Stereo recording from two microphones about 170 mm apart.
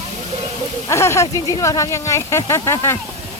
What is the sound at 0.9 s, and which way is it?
Speech, 15° left (ahead or behind).